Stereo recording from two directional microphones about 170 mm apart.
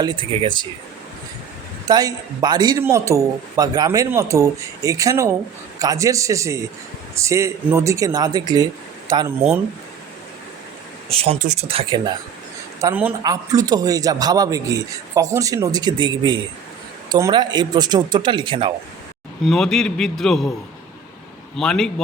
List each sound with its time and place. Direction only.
0.0 s a man's voice: 30° right (ahead or behind)
1.9 s a man's voice: 20° right (ahead or behind)
11.1 s speech: 35° right (ahead or behind)
12.8 s a man's voice: 10° right (ahead or behind); by 18.7 s 30° right (ahead or behind)
19.5 s a man's voice: 5° left (ahead or behind)
21.5 s a man's voice: 5° left (ahead or behind)